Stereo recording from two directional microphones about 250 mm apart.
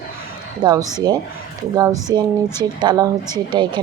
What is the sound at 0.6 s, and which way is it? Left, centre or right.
Speech, centre.